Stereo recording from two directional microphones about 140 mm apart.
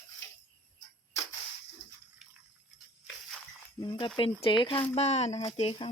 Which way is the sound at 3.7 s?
35° left (ahead or behind).